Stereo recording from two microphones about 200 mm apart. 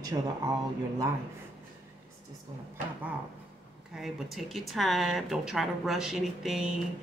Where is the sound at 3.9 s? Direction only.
Centre (ahead or behind).